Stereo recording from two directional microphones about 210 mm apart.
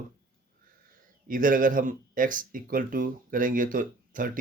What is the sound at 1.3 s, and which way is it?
Speech, 40° right (ahead or behind).